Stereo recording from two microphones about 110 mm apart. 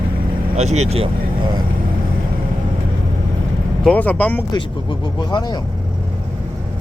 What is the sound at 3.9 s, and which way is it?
Speech, 15° left (ahead or behind).